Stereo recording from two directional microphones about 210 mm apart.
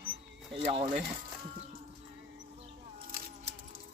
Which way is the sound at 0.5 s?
25° right (ahead or behind).